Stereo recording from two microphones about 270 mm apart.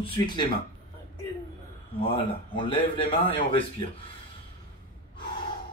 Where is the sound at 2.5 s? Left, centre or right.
Centre.